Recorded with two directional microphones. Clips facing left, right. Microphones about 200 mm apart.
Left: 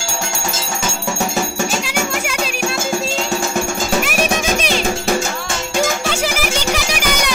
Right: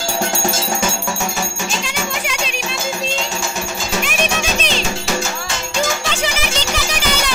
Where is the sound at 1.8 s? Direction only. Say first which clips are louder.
Left 3 dB; 5° left (ahead or behind).